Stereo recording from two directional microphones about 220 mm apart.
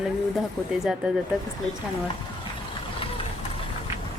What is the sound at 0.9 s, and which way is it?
Speech, 5° right (ahead or behind).